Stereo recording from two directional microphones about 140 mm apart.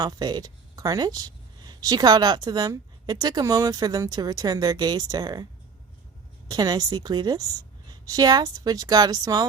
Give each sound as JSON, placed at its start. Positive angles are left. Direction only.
{"t": 0.0, "sound": "speech", "side_deg": -30}
{"t": 6.5, "sound": "speech", "side_deg": -30}